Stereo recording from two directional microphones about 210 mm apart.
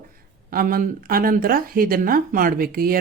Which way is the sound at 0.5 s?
40° right (ahead or behind).